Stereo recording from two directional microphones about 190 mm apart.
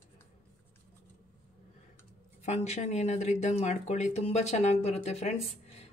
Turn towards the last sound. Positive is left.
turn(degrees=30)  # may be behind; listen again after turning